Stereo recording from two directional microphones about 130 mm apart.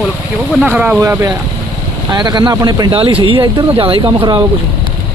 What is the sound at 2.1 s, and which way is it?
Speech, 30° right (ahead or behind).